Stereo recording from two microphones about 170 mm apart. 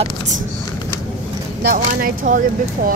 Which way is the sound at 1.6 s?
55° right (ahead or behind).